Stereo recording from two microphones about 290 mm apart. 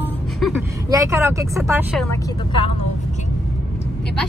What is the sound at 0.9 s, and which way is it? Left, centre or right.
Speech, centre.